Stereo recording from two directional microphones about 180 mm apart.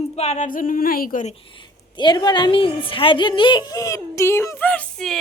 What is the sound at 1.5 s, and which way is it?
A woman's voice, 25° left (ahead or behind).